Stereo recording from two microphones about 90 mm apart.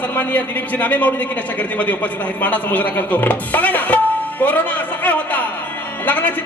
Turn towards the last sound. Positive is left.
turn(degrees=15)  # may be behind; listen again after turning